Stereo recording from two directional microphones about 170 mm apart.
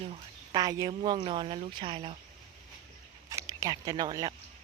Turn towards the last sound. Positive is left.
turn(degrees=-20)  # may be behind; listen again after turning